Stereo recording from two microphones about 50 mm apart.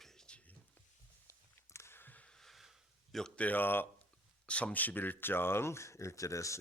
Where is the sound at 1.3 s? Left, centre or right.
Left.